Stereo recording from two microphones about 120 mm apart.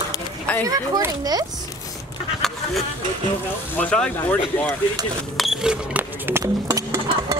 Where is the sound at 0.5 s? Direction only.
15° left (ahead or behind).